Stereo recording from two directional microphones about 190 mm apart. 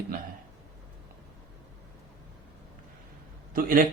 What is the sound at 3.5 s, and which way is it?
Speech, 45° right (ahead or behind).